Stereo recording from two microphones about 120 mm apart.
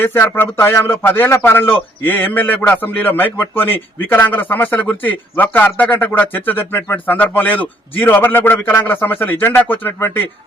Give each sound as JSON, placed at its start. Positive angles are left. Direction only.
{"t": 0.0, "sound": "speech", "side_deg": 15}